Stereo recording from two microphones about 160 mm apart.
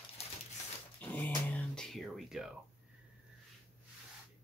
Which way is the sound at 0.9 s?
10° left (ahead or behind).